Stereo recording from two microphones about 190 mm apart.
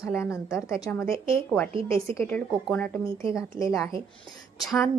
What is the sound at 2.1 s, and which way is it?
A woman's voice, 10° left (ahead or behind).